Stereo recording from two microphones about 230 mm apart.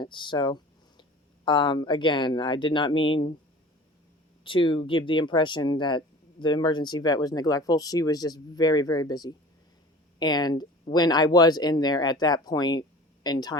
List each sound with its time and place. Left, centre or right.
0.0 s speech: centre
4.4 s speech: left